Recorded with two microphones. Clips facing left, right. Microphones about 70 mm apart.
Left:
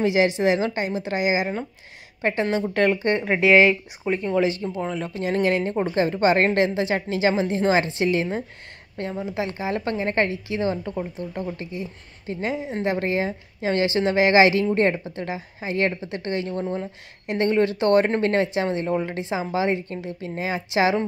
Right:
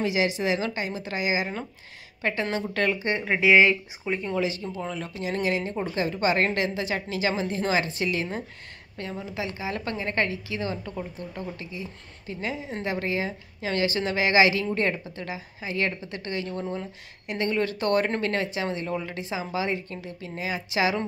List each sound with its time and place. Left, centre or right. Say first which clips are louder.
0.0 s a woman's voice: left 6 dB; left
3.0 s speech: left 5 dB; centre
3.6 s a woman's voice: left 3 dB; left
4.4 s a woman's voice: left 6 dB; left
9.4 s speech: left 5 dB; left
12.5 s a woman's voice: left 6 dB; left
12.9 s speech: left 2 dB; left